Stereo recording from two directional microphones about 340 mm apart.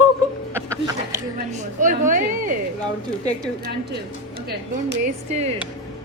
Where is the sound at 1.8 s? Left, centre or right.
Right.